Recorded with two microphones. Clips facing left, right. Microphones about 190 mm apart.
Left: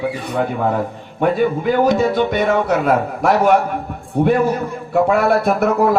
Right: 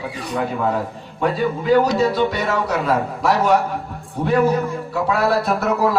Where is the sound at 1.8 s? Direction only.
55° left (ahead or behind).